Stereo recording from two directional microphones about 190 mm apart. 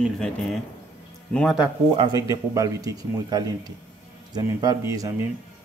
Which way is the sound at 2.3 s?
20° right (ahead or behind).